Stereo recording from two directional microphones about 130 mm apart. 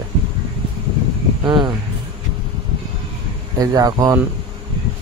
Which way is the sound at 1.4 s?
35° right (ahead or behind).